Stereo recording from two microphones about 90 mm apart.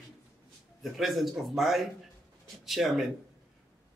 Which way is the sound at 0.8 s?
Centre (ahead or behind).